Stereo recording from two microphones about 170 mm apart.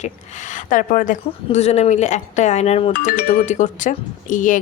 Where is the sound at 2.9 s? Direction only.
55° left (ahead or behind).